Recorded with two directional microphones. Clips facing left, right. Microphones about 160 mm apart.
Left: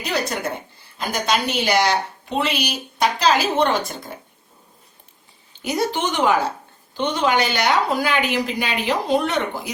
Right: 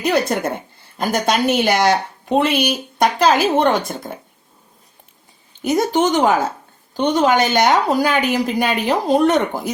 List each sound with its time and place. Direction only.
0.0 s a woman's voice: 55° right (ahead or behind)
5.6 s a woman's voice: 45° right (ahead or behind)